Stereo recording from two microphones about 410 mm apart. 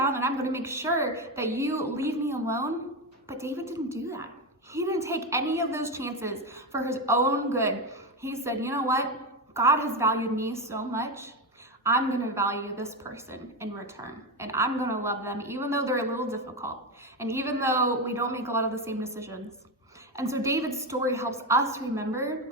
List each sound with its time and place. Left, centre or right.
0.0 s a woman's voice: centre